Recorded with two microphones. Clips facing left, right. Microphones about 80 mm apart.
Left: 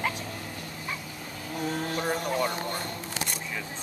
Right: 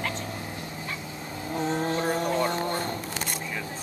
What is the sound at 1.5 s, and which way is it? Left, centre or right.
Vehicle, right.